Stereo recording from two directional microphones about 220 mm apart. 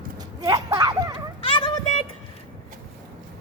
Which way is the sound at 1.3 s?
25° left (ahead or behind).